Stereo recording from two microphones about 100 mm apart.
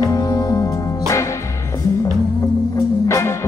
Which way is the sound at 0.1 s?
35° left (ahead or behind).